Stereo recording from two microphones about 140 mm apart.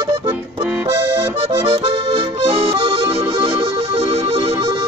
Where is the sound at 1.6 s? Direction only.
40° right (ahead or behind).